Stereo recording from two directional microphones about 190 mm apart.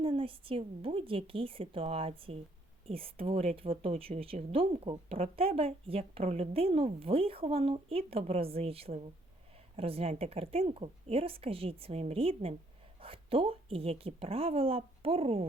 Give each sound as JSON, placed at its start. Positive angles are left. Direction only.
{"t": 0.0, "sound": "a woman's voice", "side_deg": -30}